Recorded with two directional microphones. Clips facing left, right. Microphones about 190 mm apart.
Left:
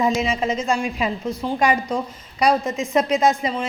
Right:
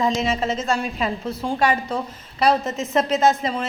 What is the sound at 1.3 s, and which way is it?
Speech, 5° right (ahead or behind).